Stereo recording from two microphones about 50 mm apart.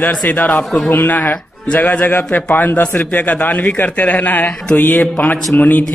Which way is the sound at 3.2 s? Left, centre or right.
Left.